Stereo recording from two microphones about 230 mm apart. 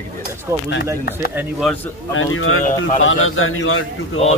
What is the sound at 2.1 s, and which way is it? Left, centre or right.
Speech, left.